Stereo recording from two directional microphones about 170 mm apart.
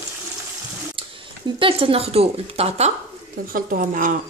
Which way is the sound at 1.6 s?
30° right (ahead or behind).